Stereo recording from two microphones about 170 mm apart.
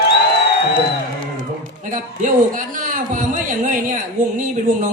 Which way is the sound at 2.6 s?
50° right (ahead or behind).